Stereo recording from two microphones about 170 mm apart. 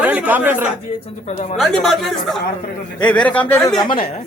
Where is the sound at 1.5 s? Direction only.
Centre (ahead or behind).